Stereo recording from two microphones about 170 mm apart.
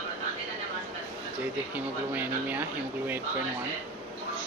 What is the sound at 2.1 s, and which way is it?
Speech, 10° right (ahead or behind).